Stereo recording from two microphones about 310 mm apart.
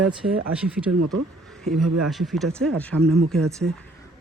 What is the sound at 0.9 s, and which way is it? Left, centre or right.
Speech, right.